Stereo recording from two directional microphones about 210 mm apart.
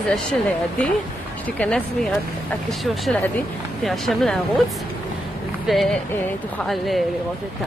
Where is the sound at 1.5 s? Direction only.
5° left (ahead or behind).